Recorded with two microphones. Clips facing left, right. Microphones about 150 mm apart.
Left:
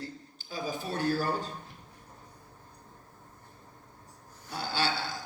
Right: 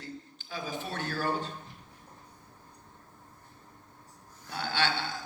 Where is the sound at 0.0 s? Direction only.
40° left (ahead or behind).